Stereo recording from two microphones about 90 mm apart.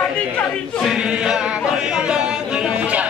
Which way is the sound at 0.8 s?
10° right (ahead or behind).